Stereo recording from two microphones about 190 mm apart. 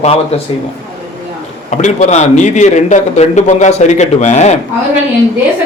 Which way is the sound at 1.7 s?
35° left (ahead or behind).